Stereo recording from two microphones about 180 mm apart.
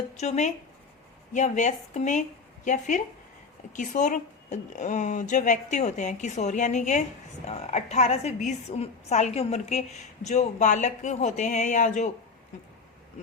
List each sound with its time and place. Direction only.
0.2 s a woman's voice: 40° left (ahead or behind)